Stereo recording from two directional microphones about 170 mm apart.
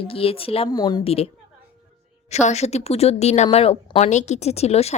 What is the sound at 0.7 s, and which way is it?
Speech, 25° left (ahead or behind).